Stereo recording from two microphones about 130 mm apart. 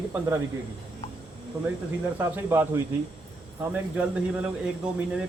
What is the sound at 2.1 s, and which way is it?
Speech, 15° right (ahead or behind).